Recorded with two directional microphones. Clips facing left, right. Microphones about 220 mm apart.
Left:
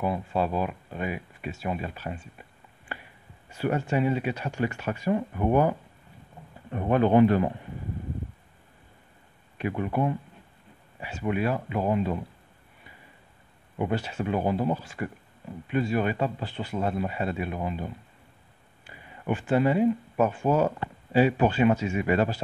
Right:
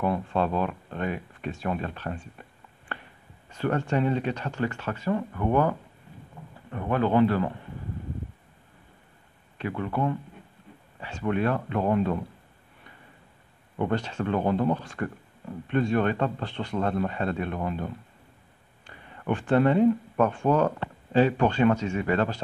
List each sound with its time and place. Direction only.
0.0 s speech: 5° left (ahead or behind)
9.6 s speech: 15° left (ahead or behind)
13.7 s speech: 10° left (ahead or behind)